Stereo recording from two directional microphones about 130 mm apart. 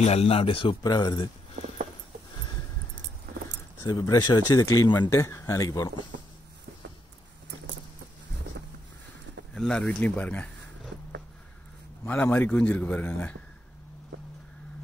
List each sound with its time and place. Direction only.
0.0 s a man's voice: 50° left (ahead or behind)
0.8 s speech: 30° left (ahead or behind)
3.8 s speech: 25° left (ahead or behind)
9.5 s a man's voice: 5° left (ahead or behind)
12.1 s a man's voice: 15° left (ahead or behind)